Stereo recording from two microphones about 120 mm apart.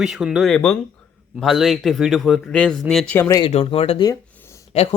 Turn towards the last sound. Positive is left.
turn(degrees=55)  # may be behind; listen again after turning